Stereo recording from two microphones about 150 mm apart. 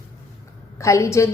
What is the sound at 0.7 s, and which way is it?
Speech, 20° left (ahead or behind).